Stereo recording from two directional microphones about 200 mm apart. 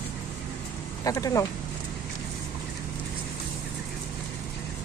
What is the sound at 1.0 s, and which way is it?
Speech, 15° left (ahead or behind).